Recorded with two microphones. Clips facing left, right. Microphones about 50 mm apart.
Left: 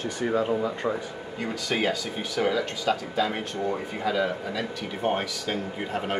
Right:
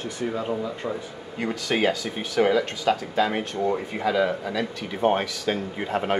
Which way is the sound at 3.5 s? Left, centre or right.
Right.